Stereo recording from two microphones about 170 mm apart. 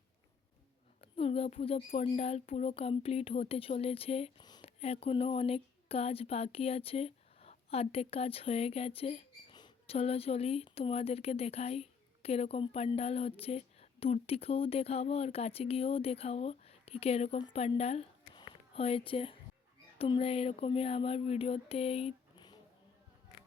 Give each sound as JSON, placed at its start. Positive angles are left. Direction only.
{"t": 1.0, "sound": "speech", "side_deg": 35}